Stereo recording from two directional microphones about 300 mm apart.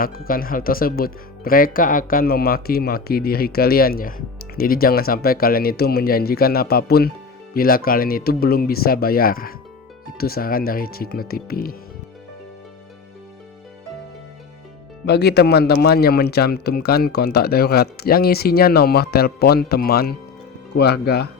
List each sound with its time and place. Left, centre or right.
0.0 s speech: left
15.0 s speech: left